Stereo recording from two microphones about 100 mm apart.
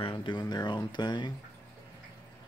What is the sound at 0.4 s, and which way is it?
Speech, 45° left (ahead or behind).